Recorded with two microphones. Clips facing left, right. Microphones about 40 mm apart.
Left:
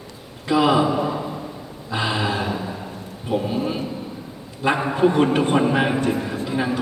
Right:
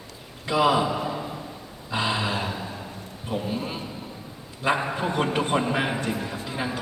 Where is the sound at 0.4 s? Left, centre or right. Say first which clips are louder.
Left 4 dB; centre.